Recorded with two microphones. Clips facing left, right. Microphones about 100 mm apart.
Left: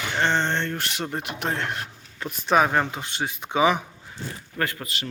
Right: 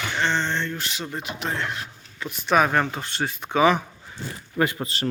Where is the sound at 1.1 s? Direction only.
55° left (ahead or behind); by 2.5 s 40° left (ahead or behind).